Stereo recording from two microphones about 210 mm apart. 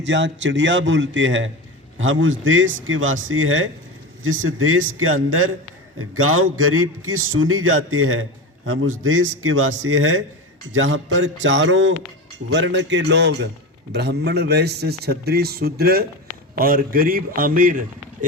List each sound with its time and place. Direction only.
0.0 s a man's voice: 60° right (ahead or behind); by 18.3 s 40° right (ahead or behind)